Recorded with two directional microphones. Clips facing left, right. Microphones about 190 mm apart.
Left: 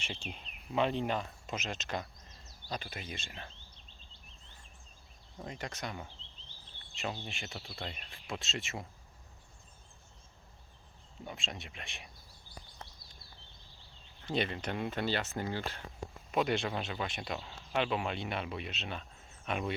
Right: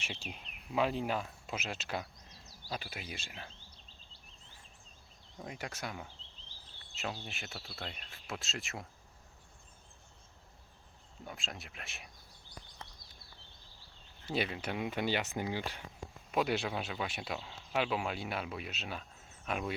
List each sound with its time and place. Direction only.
0.0 s speech: 5° right (ahead or behind)
5.4 s speech: 10° right (ahead or behind)
11.3 s speech: centre (ahead or behind)
14.3 s speech: 5° right (ahead or behind)